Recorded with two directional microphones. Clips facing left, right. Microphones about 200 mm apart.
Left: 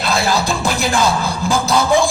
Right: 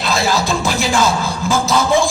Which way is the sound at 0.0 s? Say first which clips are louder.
Even; centre (ahead or behind).